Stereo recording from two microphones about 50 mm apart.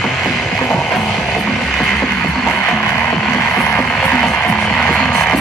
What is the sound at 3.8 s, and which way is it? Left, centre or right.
Music, left.